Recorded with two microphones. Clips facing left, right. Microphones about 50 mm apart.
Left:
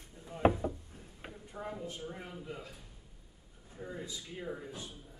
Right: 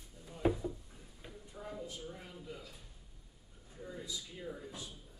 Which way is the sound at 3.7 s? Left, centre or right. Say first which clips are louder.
Left 2 dB; left.